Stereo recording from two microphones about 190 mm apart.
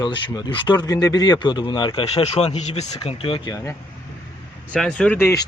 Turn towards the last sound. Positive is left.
turn(degrees=15)  # may be behind; listen again after turning